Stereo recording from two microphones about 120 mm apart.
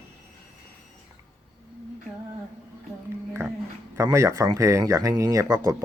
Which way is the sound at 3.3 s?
20° right (ahead or behind).